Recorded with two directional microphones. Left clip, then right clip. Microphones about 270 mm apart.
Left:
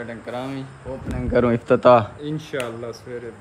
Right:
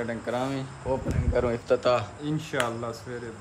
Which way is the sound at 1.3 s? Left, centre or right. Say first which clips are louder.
Left 7 dB; left.